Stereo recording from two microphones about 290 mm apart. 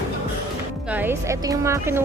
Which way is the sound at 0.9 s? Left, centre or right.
Centre.